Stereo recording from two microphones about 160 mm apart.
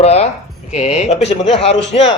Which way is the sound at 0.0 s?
40° left (ahead or behind).